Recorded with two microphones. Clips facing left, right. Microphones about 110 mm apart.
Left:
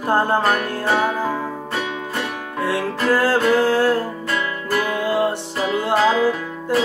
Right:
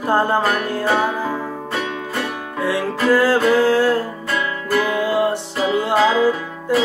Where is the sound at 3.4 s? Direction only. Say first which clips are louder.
Right 1 dB; 5° left (ahead or behind).